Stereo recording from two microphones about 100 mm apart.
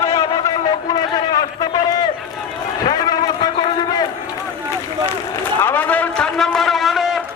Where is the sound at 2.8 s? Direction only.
40° left (ahead or behind).